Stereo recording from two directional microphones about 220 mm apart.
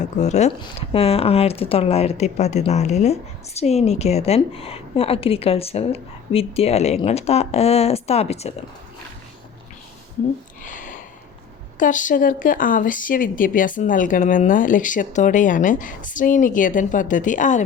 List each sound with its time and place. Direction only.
0.0 s a woman's voice: 30° left (ahead or behind)
10.6 s a sound: 35° left (ahead or behind)
11.8 s speech: 35° left (ahead or behind)